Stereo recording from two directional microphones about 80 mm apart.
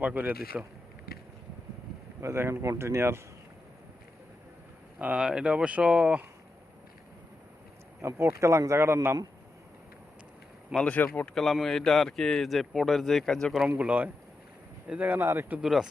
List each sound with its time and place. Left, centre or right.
0.0 s speech: right
2.2 s speech: right
4.9 s speech: centre
8.0 s speech: right
10.8 s a man's voice: centre
13.7 s speech: centre
15.2 s speech: right
15.6 s a man's voice: centre